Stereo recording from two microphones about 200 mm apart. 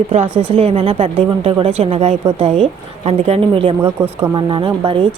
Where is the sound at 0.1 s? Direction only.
35° right (ahead or behind).